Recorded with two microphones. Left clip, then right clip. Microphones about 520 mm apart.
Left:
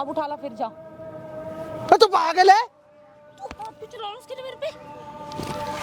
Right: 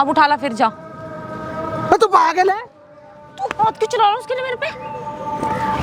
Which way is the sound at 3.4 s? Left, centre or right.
Right.